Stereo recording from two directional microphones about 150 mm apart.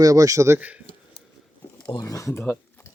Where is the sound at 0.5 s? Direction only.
10° right (ahead or behind).